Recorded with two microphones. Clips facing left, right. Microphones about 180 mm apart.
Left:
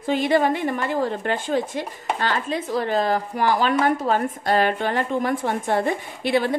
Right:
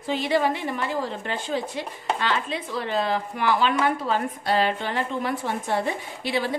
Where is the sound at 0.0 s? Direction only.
50° left (ahead or behind).